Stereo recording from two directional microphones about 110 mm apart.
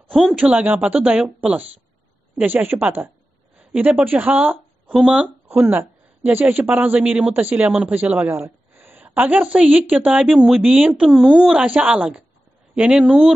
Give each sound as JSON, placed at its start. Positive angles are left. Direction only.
{"t": 0.1, "sound": "a woman's voice", "side_deg": -5}